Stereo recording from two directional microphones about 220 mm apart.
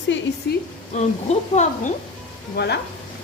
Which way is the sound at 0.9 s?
30° left (ahead or behind).